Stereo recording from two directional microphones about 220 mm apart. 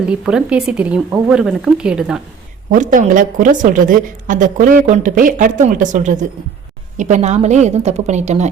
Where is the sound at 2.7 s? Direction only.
35° right (ahead or behind).